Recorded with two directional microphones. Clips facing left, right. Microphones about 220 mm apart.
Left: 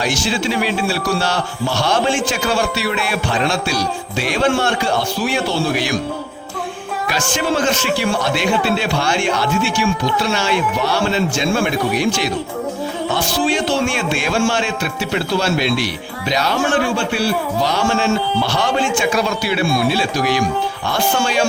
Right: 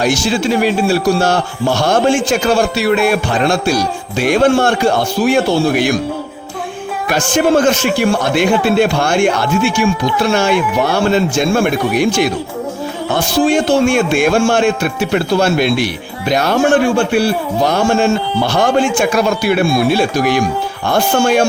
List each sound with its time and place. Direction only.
0.0 s speech: 45° right (ahead or behind)
7.1 s speech: 50° right (ahead or behind)